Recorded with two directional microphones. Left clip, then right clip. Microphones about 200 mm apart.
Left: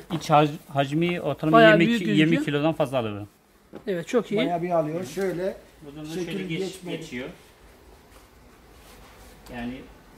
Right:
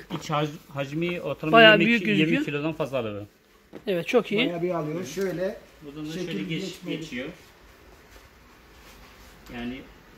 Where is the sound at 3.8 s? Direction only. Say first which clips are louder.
Right 2 dB; centre (ahead or behind).